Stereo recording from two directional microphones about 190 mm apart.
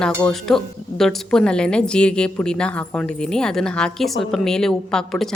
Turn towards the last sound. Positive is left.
turn(degrees=5)  # may be behind; listen again after turning